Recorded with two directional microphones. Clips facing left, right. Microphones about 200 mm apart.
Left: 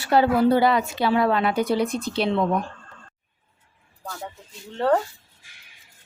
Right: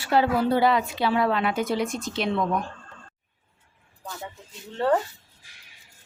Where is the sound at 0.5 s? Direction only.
40° left (ahead or behind).